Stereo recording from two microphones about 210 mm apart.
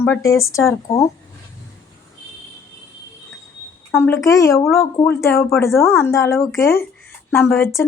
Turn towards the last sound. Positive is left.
turn(degrees=10)  # may be behind; listen again after turning